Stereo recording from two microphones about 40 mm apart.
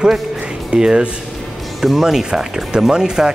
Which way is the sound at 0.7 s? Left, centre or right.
Centre.